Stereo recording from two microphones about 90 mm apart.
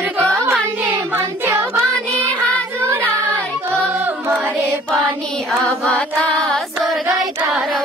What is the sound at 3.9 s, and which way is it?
A capella, 25° right (ahead or behind).